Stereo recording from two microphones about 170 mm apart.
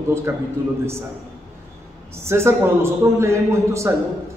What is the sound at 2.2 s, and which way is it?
A man's voice, 15° right (ahead or behind).